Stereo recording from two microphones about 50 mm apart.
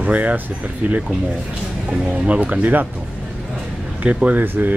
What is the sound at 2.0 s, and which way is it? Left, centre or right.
Speech, right.